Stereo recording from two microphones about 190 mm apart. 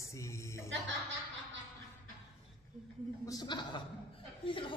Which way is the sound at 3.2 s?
20° left (ahead or behind).